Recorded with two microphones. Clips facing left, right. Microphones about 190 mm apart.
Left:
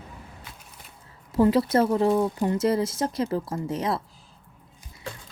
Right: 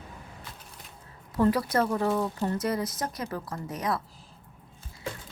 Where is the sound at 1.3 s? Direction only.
25° left (ahead or behind).